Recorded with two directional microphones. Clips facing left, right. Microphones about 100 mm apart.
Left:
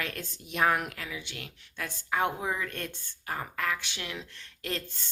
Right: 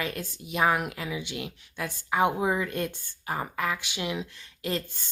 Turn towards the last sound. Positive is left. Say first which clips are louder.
# right 5 dB
turn(degrees=-5)  # may be behind; listen again after turning